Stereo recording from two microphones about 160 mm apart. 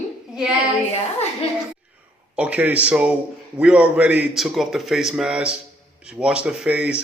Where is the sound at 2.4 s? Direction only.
10° right (ahead or behind).